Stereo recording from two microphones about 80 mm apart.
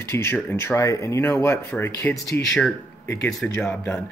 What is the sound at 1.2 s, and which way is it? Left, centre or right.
Speech, left.